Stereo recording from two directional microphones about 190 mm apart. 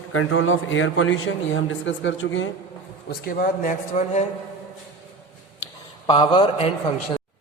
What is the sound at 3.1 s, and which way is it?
Speech, 50° left (ahead or behind).